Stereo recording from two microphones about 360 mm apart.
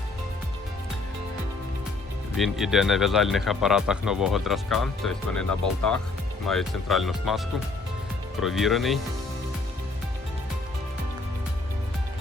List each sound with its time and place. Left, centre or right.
2.4 s speech: centre